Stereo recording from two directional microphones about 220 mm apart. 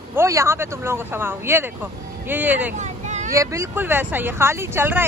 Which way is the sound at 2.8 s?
30° right (ahead or behind).